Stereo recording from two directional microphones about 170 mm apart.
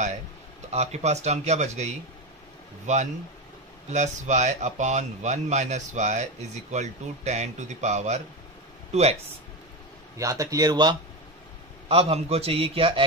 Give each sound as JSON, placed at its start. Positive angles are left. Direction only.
{"t": 0.7, "sound": "speech", "side_deg": -40}
{"t": 10.1, "sound": "a man's voice", "side_deg": -20}
{"t": 11.9, "sound": "speech", "side_deg": -35}